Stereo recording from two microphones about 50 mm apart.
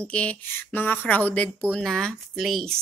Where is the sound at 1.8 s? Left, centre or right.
Centre.